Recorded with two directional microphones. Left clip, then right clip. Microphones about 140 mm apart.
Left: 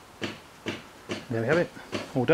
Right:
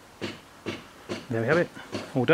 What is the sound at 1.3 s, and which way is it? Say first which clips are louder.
Speech: right 1 dB; 20° right (ahead or behind).